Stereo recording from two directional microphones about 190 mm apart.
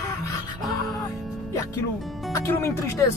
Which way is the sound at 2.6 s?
15° left (ahead or behind).